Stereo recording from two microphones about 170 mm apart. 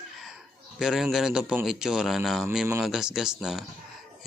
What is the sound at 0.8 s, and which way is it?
Speech, 5° right (ahead or behind).